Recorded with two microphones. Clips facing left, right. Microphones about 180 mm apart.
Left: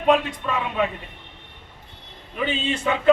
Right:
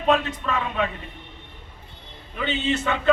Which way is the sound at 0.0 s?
10° left (ahead or behind).